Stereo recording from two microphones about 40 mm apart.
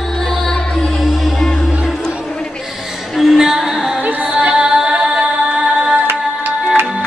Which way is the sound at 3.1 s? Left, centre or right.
Centre.